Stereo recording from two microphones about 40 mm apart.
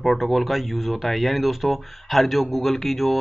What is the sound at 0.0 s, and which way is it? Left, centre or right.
Speech, centre.